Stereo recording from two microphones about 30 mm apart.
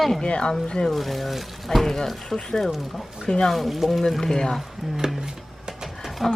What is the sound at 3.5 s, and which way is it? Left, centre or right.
Speech, centre.